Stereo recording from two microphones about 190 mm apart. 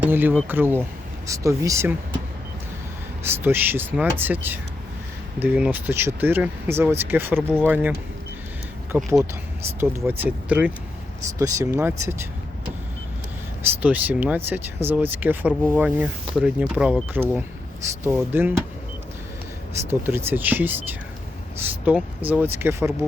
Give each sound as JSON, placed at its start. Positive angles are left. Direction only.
{"t": 0.0, "sound": "speech", "side_deg": -10}
{"t": 3.2, "sound": "speech", "side_deg": -10}
{"t": 8.9, "sound": "speech", "side_deg": -5}
{"t": 13.8, "sound": "speech", "side_deg": -10}
{"t": 19.9, "sound": "speech", "side_deg": -10}
{"t": 21.8, "sound": "speech", "side_deg": -10}